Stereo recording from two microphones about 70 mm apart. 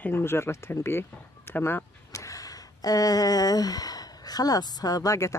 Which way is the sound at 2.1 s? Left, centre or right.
Left.